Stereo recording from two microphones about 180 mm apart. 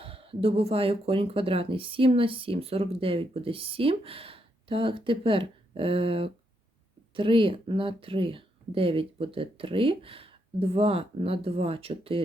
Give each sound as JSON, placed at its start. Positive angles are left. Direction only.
{"t": 0.0, "sound": "speech", "side_deg": -30}